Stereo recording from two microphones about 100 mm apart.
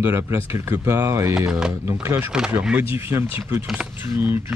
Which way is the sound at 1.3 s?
5° right (ahead or behind).